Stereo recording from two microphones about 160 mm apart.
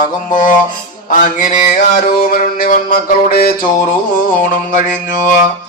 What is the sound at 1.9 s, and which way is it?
Mantra, 60° left (ahead or behind).